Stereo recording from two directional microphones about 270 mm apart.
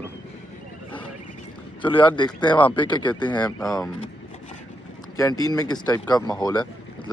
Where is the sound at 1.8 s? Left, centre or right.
Centre.